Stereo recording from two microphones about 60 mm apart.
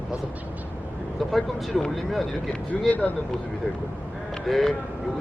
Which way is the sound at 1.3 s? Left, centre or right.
Centre.